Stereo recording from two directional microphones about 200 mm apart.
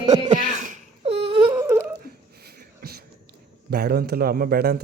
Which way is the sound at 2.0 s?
50° right (ahead or behind).